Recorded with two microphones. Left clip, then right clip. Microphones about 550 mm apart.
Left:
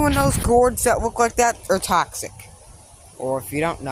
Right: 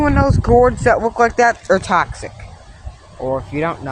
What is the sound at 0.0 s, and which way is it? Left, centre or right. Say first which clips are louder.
Speech: right 4 dB; left.